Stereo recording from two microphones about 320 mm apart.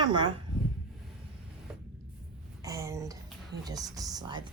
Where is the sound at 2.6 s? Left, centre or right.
Centre.